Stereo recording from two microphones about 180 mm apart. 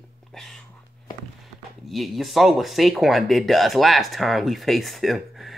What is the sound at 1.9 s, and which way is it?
Speech, centre (ahead or behind).